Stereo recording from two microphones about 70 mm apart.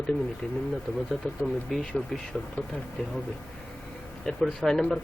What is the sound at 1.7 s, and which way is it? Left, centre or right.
Speech, centre.